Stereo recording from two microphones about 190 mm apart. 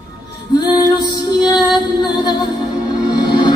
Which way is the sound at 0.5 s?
20° left (ahead or behind).